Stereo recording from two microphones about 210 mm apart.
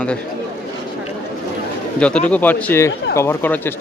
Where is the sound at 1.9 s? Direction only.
5° left (ahead or behind).